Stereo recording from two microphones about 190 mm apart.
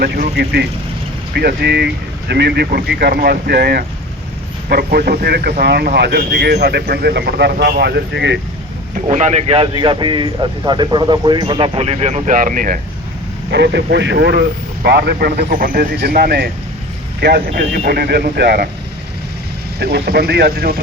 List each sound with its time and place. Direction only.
0.0 s speech: 55° right (ahead or behind)
9.0 s speech: 40° right (ahead or behind)
13.5 s speech: 65° right (ahead or behind)
19.8 s speech: 55° right (ahead or behind)